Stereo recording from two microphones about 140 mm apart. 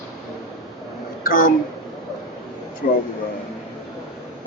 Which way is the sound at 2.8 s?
75° left (ahead or behind).